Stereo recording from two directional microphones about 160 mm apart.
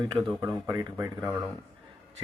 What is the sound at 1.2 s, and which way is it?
Speech, centre (ahead or behind).